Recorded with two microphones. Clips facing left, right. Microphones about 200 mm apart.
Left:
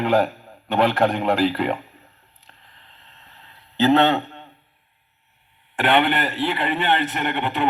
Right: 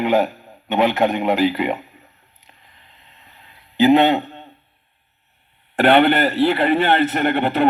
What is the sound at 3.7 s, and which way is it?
Speech, 15° right (ahead or behind).